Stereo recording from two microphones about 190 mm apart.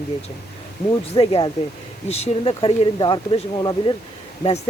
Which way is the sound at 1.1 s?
30° left (ahead or behind).